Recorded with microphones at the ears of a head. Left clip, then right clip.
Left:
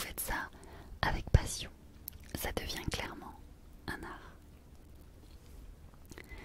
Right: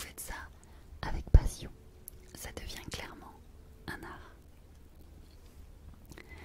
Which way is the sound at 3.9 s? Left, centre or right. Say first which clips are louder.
Left 1 dB; centre.